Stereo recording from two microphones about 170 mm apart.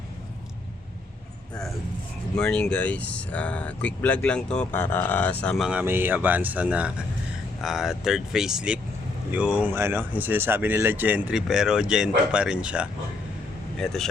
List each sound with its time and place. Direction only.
2.3 s speech: 5° left (ahead or behind)
5.6 s speech: 10° right (ahead or behind)